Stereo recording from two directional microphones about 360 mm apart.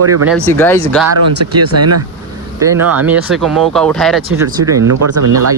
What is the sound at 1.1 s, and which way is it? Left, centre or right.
Speech, right.